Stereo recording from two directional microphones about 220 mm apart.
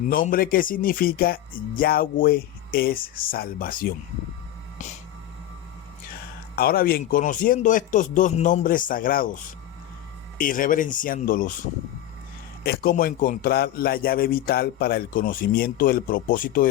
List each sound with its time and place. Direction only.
0.1 s speech: 40° left (ahead or behind)
6.6 s speech: 45° left (ahead or behind)
10.3 s speech: 40° left (ahead or behind)
12.6 s a man's voice: 45° left (ahead or behind)